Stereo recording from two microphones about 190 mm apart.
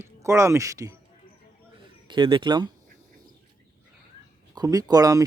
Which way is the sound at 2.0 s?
25° right (ahead or behind).